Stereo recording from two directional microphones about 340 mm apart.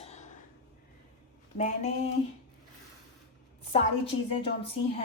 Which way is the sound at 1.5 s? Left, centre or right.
Left.